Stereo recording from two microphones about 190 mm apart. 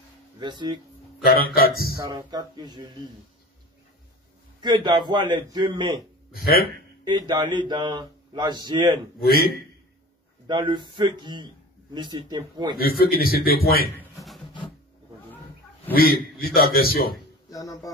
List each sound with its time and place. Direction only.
0.4 s speech: 25° right (ahead or behind)
1.2 s a man's voice: 50° left (ahead or behind)
2.0 s speech: 20° right (ahead or behind)
4.6 s speech: 25° right (ahead or behind)
6.3 s speech: 50° left (ahead or behind)
7.1 s speech: 25° right (ahead or behind)
9.2 s a man's voice: 55° left (ahead or behind)
10.4 s speech: 25° right (ahead or behind)
12.7 s a man's voice: 50° left (ahead or behind)
14.1 s music: centre (ahead or behind)
15.9 s a man's voice: 50° left (ahead or behind)
17.5 s speech: 20° left (ahead or behind)